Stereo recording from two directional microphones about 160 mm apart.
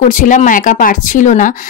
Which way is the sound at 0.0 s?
55° left (ahead or behind).